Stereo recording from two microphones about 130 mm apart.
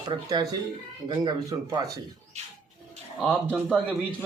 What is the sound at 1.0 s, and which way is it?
Speech, 30° right (ahead or behind).